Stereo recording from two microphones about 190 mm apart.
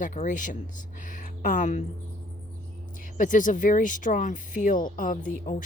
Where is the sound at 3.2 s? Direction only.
45° left (ahead or behind).